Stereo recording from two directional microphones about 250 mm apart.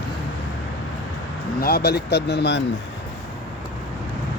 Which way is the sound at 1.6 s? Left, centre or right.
Left.